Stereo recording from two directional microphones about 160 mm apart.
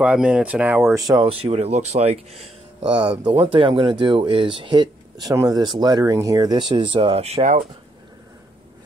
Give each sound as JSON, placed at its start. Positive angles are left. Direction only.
{"t": 0.0, "sound": "speech", "side_deg": -5}
{"t": 1.0, "sound": "speech", "side_deg": -25}
{"t": 1.4, "sound": "speech", "side_deg": -40}
{"t": 2.9, "sound": "speech", "side_deg": -30}